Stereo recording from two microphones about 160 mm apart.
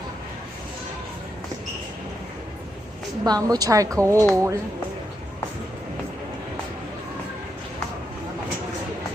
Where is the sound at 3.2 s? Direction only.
25° right (ahead or behind).